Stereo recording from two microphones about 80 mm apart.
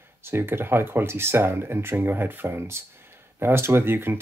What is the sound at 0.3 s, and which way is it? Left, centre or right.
Speech, right.